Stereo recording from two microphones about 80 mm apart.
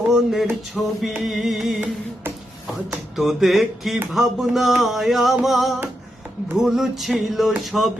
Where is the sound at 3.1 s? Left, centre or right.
Centre.